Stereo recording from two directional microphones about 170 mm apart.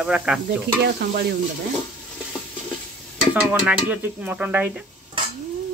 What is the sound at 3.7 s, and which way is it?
Speech, 10° right (ahead or behind).